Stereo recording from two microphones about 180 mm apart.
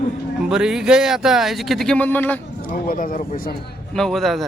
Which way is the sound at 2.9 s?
50° left (ahead or behind).